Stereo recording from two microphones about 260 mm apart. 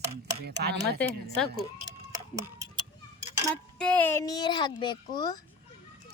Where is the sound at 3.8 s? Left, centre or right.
Centre.